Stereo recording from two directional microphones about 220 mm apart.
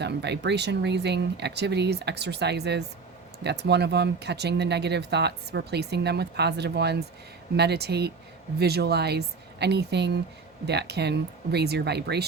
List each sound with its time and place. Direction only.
0.0 s speech: 50° right (ahead or behind)